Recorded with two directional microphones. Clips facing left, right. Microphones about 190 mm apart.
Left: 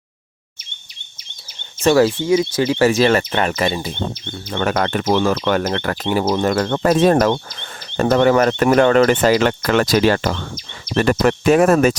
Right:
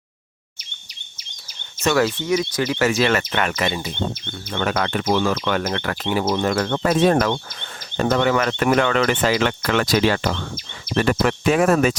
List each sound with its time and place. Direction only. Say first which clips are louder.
1.8 s speech: left 5 dB; 30° left (ahead or behind)